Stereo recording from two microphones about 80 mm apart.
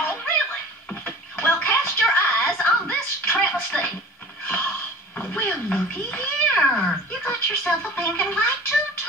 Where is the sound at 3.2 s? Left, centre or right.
Centre.